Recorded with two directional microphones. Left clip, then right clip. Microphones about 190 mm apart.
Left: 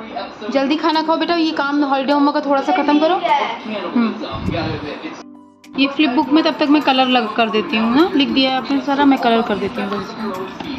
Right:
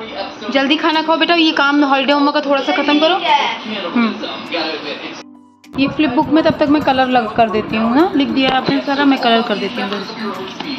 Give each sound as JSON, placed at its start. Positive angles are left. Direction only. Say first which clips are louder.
{"t": 0.5, "sound": "a man's voice", "louder": "right 2 dB", "side_deg": 5}
{"t": 2.0, "sound": "speech", "louder": "right 2 dB", "side_deg": 15}
{"t": 5.8, "sound": "a man's voice", "louder": "right 1 dB", "side_deg": 0}
{"t": 8.8, "sound": "speech", "louder": "left 3 dB", "side_deg": 15}